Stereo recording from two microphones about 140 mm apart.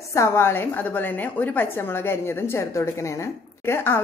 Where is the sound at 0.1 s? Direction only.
20° left (ahead or behind).